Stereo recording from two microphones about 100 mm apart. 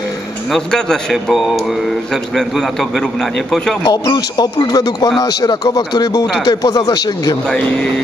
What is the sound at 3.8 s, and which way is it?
Speech, 45° left (ahead or behind).